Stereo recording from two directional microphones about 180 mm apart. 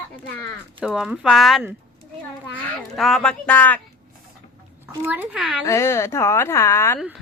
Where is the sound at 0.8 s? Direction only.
5° right (ahead or behind).